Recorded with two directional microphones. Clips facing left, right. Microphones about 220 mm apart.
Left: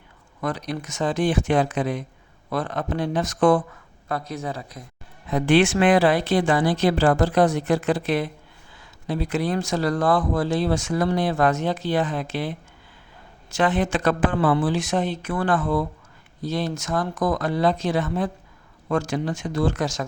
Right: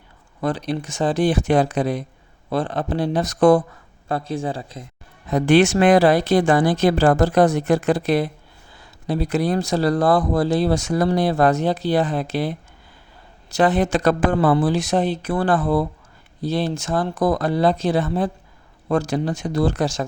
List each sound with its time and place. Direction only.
0.4 s speech: 30° right (ahead or behind)
5.3 s speech: 40° right (ahead or behind)